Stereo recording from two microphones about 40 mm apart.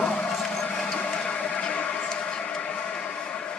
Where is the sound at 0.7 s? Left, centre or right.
Left.